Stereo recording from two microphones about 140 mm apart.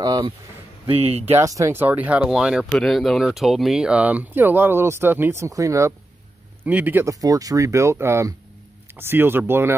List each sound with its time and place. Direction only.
0.0 s speech: 25° right (ahead or behind)
0.8 s speech: 45° right (ahead or behind)
1.4 s speech: 20° right (ahead or behind)
6.6 s speech: 10° right (ahead or behind)